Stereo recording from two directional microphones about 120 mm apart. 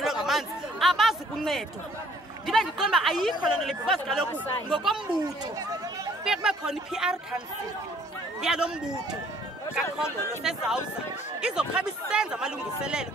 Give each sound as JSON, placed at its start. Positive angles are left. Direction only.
{"t": 0.0, "sound": "chatter", "side_deg": -5}
{"t": 2.4, "sound": "speech", "side_deg": 0}
{"t": 5.2, "sound": "speech", "side_deg": -30}
{"t": 6.2, "sound": "speech", "side_deg": -5}
{"t": 10.4, "sound": "speech", "side_deg": -5}